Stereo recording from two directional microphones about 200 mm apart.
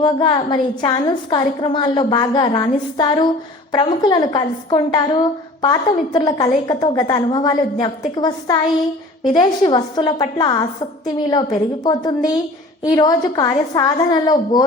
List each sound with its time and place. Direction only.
0.0 s a woman's voice: 25° left (ahead or behind)